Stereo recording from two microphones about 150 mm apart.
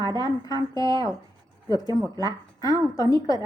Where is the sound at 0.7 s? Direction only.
25° left (ahead or behind).